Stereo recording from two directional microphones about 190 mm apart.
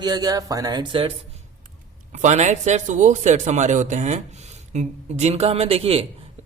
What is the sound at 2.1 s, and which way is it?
A man's voice, 35° right (ahead or behind).